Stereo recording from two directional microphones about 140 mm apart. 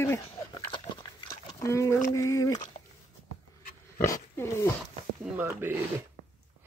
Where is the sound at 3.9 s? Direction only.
20° left (ahead or behind).